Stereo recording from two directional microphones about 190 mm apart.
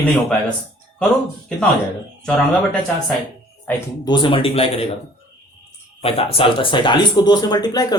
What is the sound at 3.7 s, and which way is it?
Speech, 15° left (ahead or behind).